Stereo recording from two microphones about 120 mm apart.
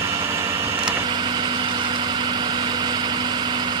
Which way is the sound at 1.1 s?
40° right (ahead or behind).